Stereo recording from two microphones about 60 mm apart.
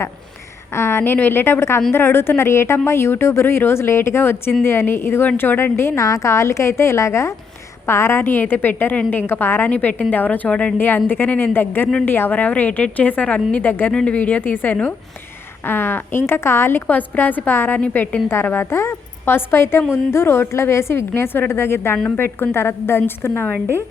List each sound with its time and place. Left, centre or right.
0.7 s a woman's voice: left
6.0 s a woman's voice: left
9.6 s speech: left
10.8 s a woman's voice: left
12.3 s a woman's voice: left
13.9 s speech: centre
14.2 s a woman's voice: left
17.7 s speech: left
18.4 s a woman's voice: left